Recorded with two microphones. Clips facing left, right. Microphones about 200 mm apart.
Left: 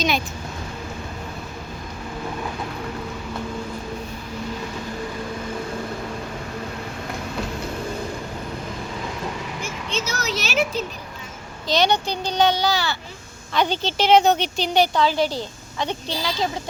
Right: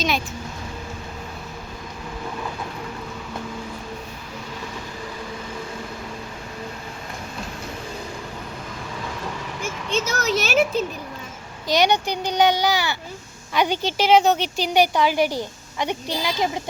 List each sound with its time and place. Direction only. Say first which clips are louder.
9.6 s vehicle: right 7 dB; 50° right (ahead or behind)
11.7 s a woman's voice: right 1 dB; 15° right (ahead or behind)